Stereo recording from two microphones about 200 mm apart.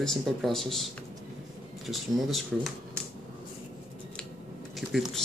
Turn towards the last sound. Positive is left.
turn(degrees=0)  # may be behind; listen again after turning